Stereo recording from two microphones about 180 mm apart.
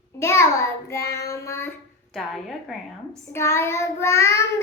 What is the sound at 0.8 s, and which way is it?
Child singing, 15° left (ahead or behind).